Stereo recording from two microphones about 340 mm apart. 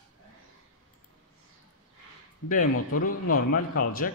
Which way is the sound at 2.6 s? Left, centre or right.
Left.